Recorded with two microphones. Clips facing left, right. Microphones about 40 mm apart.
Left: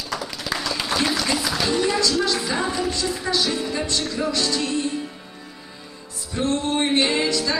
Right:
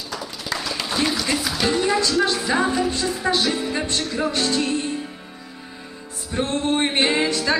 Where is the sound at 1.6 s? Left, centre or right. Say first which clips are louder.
Right 3 dB; centre.